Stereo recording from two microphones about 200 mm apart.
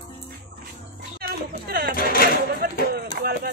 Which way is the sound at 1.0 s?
50° right (ahead or behind).